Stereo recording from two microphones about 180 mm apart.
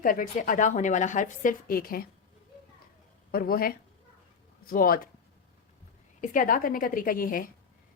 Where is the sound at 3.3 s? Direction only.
55° left (ahead or behind).